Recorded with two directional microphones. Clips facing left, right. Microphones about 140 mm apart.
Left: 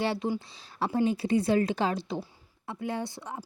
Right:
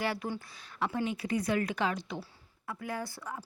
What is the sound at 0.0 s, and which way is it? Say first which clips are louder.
A woman's voice: left 5 dB; 25° left (ahead or behind).